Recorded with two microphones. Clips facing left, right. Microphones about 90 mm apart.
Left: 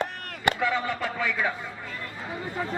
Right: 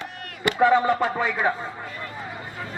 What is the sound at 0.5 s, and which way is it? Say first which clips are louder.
Speech: right 9 dB; 35° right (ahead or behind).